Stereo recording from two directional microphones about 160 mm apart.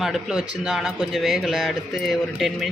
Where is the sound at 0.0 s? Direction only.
5° right (ahead or behind).